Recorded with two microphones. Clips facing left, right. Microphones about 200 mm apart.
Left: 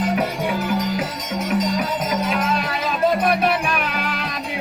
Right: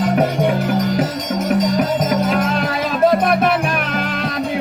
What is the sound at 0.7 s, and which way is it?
Music, 40° right (ahead or behind).